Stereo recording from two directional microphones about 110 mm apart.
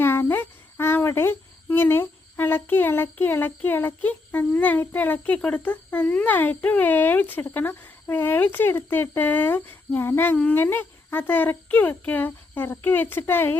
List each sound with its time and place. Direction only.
0.0 s speech: 20° left (ahead or behind)